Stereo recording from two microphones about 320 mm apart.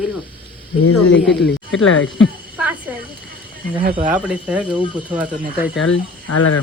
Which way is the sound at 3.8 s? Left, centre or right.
Right.